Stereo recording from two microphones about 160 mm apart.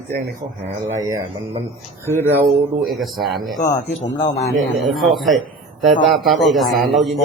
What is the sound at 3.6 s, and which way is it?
Speech, 55° left (ahead or behind).